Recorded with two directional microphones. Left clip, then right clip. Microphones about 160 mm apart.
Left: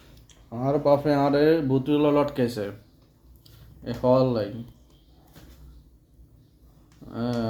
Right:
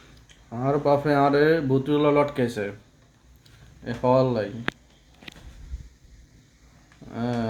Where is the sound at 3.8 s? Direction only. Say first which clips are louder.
Even; 15° right (ahead or behind).